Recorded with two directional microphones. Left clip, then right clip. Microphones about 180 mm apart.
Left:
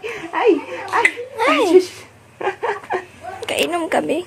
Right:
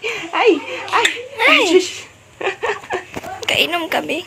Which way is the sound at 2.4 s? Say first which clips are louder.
Right 1 dB; 25° left (ahead or behind).